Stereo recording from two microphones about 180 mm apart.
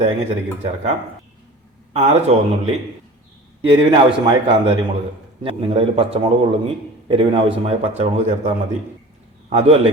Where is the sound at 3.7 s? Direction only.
25° right (ahead or behind).